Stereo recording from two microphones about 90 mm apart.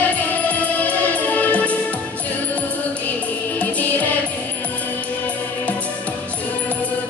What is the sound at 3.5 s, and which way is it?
Music, 15° left (ahead or behind).